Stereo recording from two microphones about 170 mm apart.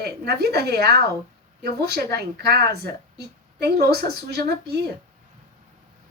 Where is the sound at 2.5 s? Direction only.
70° right (ahead or behind).